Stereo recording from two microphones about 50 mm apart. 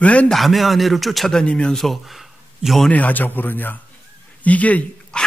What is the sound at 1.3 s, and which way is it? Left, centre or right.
Speech, centre.